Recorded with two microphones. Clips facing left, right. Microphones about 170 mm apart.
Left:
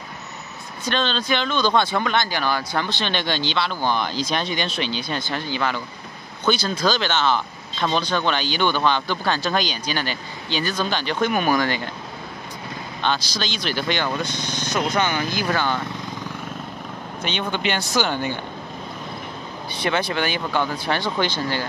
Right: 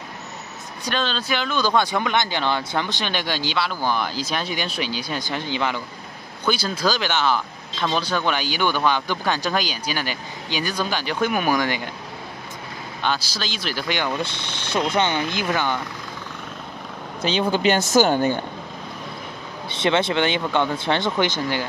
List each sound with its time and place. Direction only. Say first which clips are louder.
0.8 s speech: left 2 dB; 5° right (ahead or behind)
13.0 s speech: left 1 dB; 5° right (ahead or behind)
14.2 s speech: left 2 dB; 30° right (ahead or behind)
17.2 s speech: right 5 dB; 35° right (ahead or behind)
19.7 s speech: right 3 dB; 25° right (ahead or behind)